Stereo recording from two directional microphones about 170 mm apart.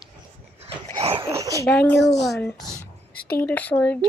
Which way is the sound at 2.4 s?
10° left (ahead or behind).